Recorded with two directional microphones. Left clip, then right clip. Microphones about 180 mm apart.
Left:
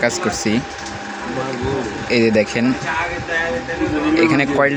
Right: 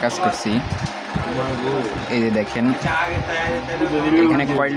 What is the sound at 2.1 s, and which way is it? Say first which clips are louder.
Speech: left 8 dB; 20° left (ahead or behind).